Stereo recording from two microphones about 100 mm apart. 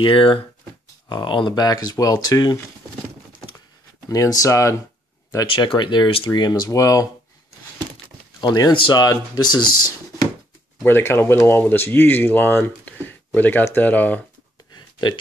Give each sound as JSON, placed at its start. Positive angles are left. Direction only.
{"t": 0.0, "sound": "speech", "side_deg": 60}
{"t": 1.0, "sound": "speech", "side_deg": 50}
{"t": 4.1, "sound": "speech", "side_deg": 35}
{"t": 5.5, "sound": "speech", "side_deg": 55}
{"t": 8.4, "sound": "speech", "side_deg": 45}
{"t": 10.8, "sound": "speech", "side_deg": 25}
{"t": 14.8, "sound": "a sound", "side_deg": 45}